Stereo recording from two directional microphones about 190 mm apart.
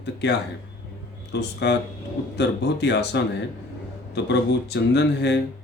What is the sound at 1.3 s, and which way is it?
Speech, 65° left (ahead or behind).